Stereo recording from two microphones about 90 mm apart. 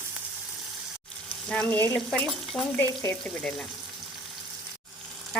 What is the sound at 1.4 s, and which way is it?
Frying, 10° left (ahead or behind).